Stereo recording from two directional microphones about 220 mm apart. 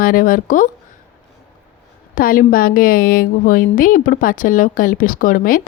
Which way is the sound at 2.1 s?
40° left (ahead or behind).